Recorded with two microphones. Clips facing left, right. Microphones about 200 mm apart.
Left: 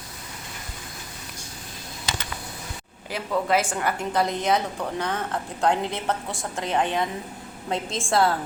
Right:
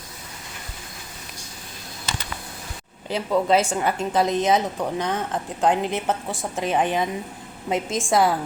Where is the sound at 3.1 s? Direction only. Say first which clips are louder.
Right 4 dB; 20° right (ahead or behind).